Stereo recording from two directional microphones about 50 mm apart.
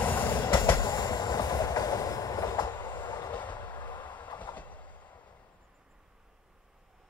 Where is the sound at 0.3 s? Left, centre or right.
Left.